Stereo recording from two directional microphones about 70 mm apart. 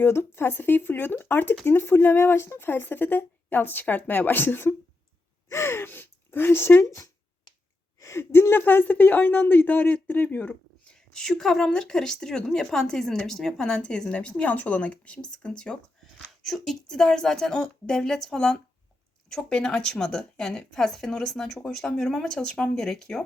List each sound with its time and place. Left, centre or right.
0.0 s speech: left
10.9 s speech: centre